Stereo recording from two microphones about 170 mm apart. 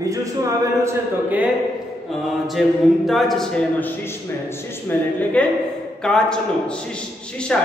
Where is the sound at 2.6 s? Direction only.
Centre (ahead or behind).